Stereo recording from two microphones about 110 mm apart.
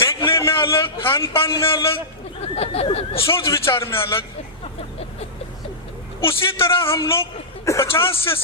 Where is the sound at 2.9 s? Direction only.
55° left (ahead or behind).